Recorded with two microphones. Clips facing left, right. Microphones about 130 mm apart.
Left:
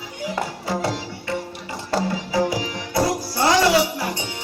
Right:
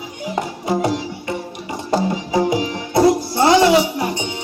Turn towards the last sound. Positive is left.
turn(degrees=-20)  # may be behind; listen again after turning